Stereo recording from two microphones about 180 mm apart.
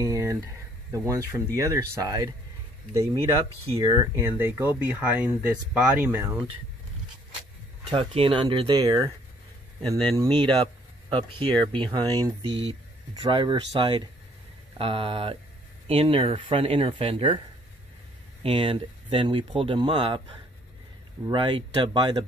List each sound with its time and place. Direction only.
0.0 s speech: 15° right (ahead or behind)
7.9 s speech: 30° right (ahead or behind)
9.8 s speech: 5° left (ahead or behind)
10.3 s speech: 30° right (ahead or behind)
18.4 s speech: 30° right (ahead or behind)
21.3 s speech: 25° right (ahead or behind)